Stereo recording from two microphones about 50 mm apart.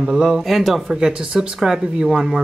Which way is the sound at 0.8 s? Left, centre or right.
Centre.